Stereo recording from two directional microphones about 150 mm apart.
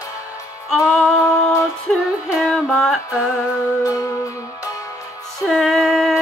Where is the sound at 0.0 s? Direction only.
20° left (ahead or behind).